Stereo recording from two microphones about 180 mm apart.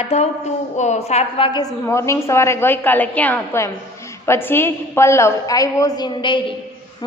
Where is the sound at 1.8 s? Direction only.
15° left (ahead or behind).